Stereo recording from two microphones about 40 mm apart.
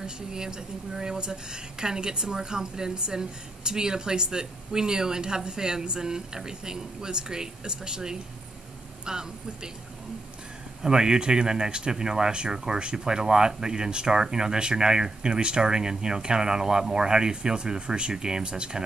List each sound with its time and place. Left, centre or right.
0.0 s a woman's voice: centre
10.8 s a woman's voice: centre